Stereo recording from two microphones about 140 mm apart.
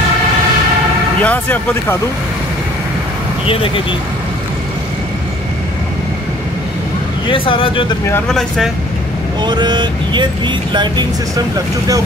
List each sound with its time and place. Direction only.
1.2 s speech: 10° left (ahead or behind)
3.4 s speech: 40° left (ahead or behind)
7.2 s speech: 40° left (ahead or behind)
8.3 s speech: 5° left (ahead or behind)
9.4 s speech: 30° right (ahead or behind)